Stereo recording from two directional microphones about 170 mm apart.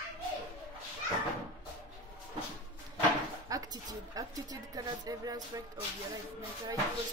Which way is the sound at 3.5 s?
20° right (ahead or behind).